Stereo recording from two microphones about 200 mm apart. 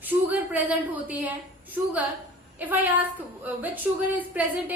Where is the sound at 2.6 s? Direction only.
10° right (ahead or behind).